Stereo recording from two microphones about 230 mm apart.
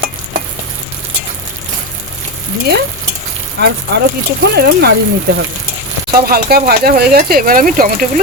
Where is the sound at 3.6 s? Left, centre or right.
Right.